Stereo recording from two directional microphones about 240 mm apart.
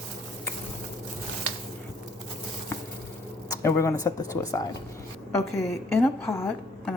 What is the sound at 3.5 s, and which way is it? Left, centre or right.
A woman's voice, centre.